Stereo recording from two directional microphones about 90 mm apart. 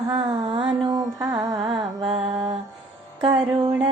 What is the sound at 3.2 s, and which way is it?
Music, 65° right (ahead or behind).